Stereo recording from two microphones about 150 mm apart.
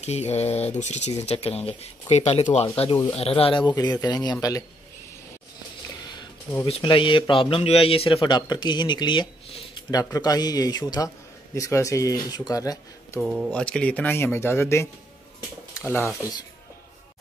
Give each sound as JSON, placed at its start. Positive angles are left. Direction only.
{"t": 0.0, "sound": "speech", "side_deg": 50}
{"t": 6.6, "sound": "speech", "side_deg": 35}
{"t": 9.8, "sound": "speech", "side_deg": 25}
{"t": 13.2, "sound": "speech", "side_deg": 0}